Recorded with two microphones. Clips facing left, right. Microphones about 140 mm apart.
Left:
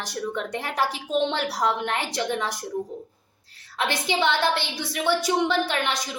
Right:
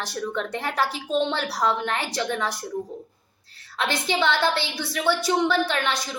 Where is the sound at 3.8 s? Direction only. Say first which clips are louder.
Even; 15° left (ahead or behind).